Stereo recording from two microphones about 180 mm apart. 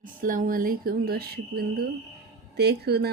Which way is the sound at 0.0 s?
50° right (ahead or behind).